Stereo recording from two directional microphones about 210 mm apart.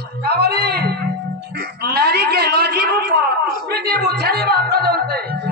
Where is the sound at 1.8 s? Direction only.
50° right (ahead or behind).